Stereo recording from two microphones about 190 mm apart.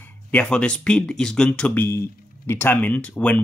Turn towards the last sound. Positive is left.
turn(degrees=5)  # may be behind; listen again after turning